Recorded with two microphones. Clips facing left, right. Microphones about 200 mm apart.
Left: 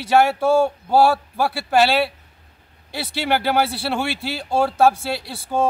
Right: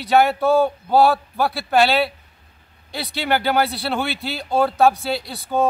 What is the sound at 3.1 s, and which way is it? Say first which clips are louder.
Speech: even; centre (ahead or behind).